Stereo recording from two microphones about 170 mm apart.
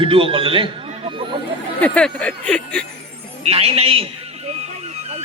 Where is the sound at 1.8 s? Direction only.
5° left (ahead or behind).